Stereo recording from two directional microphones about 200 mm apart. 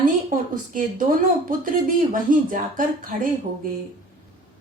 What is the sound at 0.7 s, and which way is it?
Speech, 40° right (ahead or behind).